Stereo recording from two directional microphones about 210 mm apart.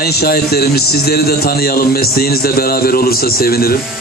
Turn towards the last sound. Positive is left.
turn(degrees=45)  # may be behind; listen again after turning